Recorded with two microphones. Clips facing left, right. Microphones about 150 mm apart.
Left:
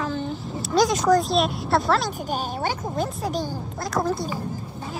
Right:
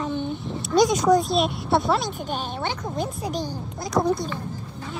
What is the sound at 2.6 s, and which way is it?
Speech, 45° left (ahead or behind).